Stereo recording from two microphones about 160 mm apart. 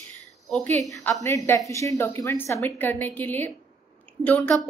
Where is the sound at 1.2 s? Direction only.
20° left (ahead or behind).